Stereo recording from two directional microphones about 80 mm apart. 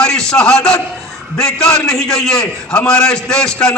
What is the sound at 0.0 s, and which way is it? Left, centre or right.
A man's voice, centre.